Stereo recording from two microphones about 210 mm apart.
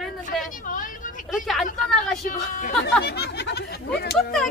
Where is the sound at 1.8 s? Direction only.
Centre (ahead or behind).